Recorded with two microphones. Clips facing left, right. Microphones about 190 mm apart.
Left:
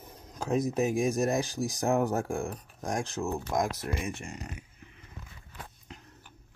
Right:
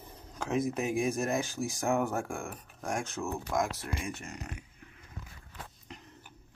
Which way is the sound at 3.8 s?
30° left (ahead or behind).